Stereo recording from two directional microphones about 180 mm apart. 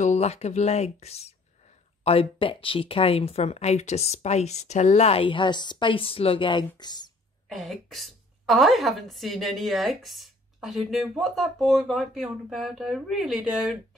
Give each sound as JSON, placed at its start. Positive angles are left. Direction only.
{"t": 0.0, "sound": "speech", "side_deg": 40}
{"t": 7.4, "sound": "a woman's voice", "side_deg": 0}